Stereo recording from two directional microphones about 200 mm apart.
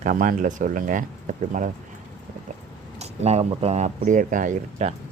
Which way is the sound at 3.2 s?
30° right (ahead or behind).